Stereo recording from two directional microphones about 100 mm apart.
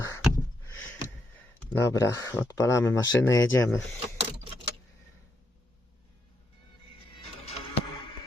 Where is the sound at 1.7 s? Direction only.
30° left (ahead or behind).